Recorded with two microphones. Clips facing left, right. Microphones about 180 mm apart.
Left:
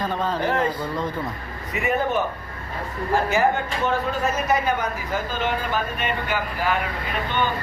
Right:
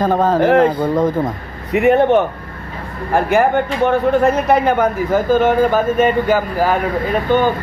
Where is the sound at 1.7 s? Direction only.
70° right (ahead or behind); by 7.5 s 40° right (ahead or behind).